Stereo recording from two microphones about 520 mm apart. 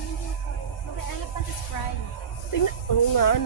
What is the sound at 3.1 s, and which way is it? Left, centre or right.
Speech, left.